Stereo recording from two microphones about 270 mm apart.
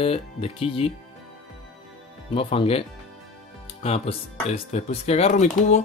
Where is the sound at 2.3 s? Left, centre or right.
Left.